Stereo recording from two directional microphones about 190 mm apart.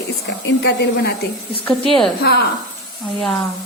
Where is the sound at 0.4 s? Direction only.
65° left (ahead or behind).